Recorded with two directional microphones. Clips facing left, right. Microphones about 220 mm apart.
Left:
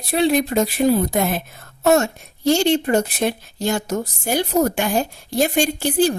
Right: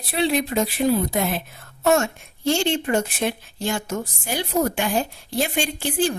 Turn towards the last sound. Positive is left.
turn(degrees=40)  # may be behind; listen again after turning